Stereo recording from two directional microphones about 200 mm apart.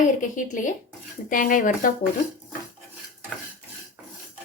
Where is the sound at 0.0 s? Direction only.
40° left (ahead or behind).